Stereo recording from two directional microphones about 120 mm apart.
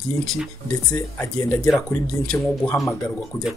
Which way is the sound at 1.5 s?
25° left (ahead or behind).